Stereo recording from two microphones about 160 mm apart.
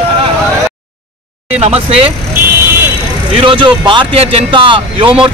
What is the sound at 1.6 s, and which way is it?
Speech, 40° right (ahead or behind).